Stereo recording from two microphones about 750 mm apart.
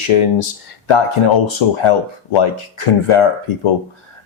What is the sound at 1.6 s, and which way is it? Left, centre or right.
Speech, left.